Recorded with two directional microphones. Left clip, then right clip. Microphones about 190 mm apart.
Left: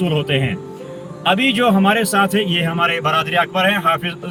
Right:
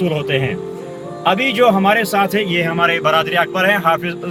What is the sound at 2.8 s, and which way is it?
A man's voice, 25° right (ahead or behind).